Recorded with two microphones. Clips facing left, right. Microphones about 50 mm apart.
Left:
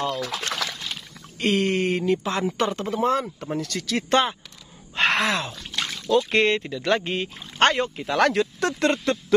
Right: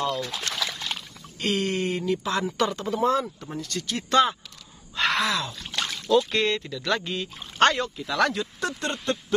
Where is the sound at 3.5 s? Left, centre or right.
Left.